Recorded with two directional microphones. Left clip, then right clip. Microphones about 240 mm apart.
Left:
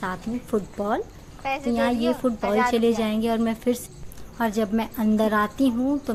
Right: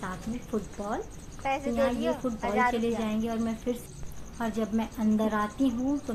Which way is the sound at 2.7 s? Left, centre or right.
Left.